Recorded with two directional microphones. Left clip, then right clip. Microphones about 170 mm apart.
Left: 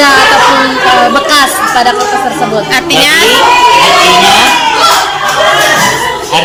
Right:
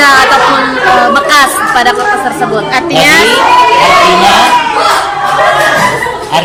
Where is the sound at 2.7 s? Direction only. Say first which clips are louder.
Right 1 dB; 10° right (ahead or behind).